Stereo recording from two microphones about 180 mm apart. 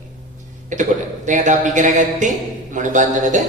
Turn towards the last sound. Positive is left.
turn(degrees=-45)  # may be behind; listen again after turning